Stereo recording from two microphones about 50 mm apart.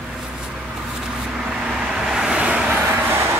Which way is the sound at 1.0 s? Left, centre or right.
Centre.